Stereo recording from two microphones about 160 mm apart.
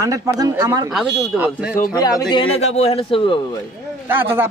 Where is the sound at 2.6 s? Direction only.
40° left (ahead or behind).